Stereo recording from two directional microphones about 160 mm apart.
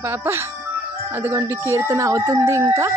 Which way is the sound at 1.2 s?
15° right (ahead or behind).